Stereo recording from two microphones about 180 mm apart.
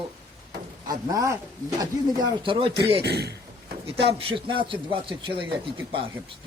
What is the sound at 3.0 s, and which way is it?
Speech, 65° right (ahead or behind).